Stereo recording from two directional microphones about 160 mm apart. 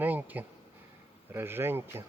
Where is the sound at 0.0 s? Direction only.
10° right (ahead or behind).